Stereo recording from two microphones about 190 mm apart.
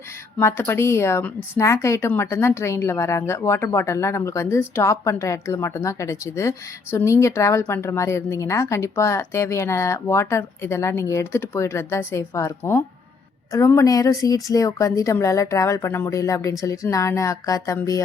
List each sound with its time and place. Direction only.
0.3 s speech: 15° left (ahead or behind)